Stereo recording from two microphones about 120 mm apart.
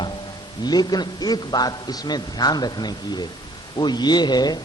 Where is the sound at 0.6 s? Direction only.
35° left (ahead or behind).